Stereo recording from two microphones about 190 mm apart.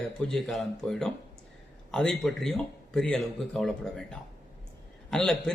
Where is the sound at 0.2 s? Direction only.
Centre (ahead or behind).